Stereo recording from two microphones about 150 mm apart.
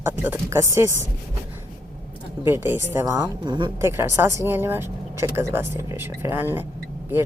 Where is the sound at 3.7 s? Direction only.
15° right (ahead or behind).